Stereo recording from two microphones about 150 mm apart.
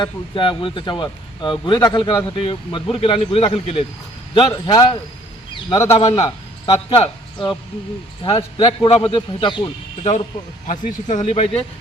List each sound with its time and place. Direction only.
0.0 s a man's voice: 35° left (ahead or behind)
6.1 s a sound: 25° left (ahead or behind)
6.7 s a man's voice: 40° left (ahead or behind)
10.0 s speech: 45° left (ahead or behind)
10.7 s speech: 55° left (ahead or behind)